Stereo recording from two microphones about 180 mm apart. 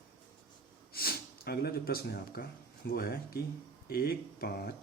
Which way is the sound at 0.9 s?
55° left (ahead or behind).